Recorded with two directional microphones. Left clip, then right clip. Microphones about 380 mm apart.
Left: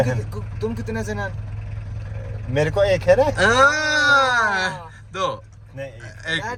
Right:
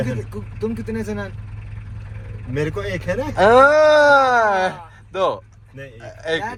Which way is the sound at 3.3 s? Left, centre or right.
Centre.